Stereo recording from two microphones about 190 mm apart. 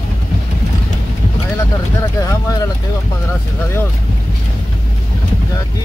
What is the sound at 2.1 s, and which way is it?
Speech, 15° left (ahead or behind).